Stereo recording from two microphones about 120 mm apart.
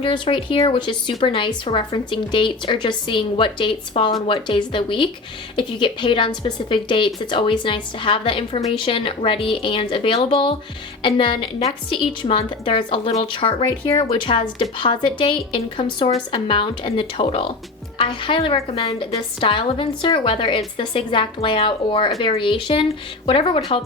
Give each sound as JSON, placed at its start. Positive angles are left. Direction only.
{"t": 0.0, "sound": "a woman's voice", "side_deg": 45}